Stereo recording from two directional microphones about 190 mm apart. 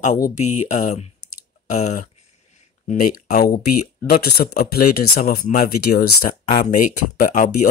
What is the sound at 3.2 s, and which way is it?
Speech, 50° left (ahead or behind).